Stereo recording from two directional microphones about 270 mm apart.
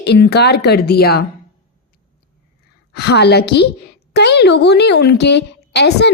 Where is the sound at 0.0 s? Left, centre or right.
Left.